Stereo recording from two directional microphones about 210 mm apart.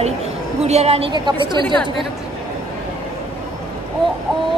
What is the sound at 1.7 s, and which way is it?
Speech, centre (ahead or behind).